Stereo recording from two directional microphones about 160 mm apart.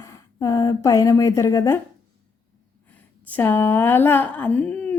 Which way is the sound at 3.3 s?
10° left (ahead or behind).